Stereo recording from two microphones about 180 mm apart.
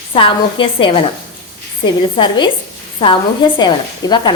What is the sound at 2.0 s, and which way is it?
Speech, 25° left (ahead or behind).